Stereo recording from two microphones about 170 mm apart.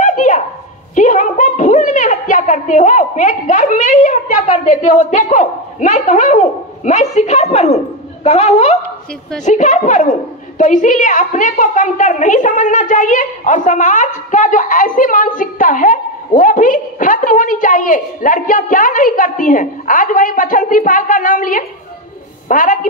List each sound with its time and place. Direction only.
0.0 s dog: 45° left (ahead or behind)
0.9 s a woman's voice: 50° left (ahead or behind)